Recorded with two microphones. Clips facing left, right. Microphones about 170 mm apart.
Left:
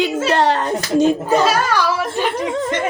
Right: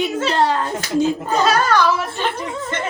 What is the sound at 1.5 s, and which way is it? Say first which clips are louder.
Speech: right 1 dB; 10° left (ahead or behind).